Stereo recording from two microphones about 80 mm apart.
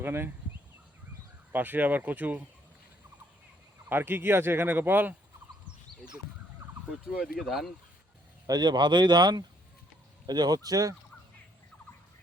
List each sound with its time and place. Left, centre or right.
0.0 s speech: right
1.5 s speech: right
3.8 s speech: right
6.6 s emergency vehicle: right
7.1 s speech: centre
8.4 s speech: right